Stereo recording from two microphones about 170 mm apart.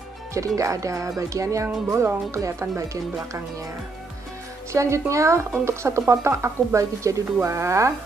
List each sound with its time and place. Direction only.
0.6 s speech: 20° right (ahead or behind)
4.7 s speech: 15° right (ahead or behind)